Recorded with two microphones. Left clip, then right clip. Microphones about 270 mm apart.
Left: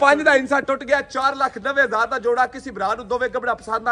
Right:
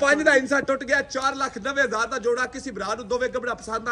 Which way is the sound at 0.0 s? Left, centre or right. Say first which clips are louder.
Left 4 dB; centre.